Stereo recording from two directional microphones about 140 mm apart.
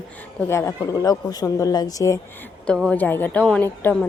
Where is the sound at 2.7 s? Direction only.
5° left (ahead or behind).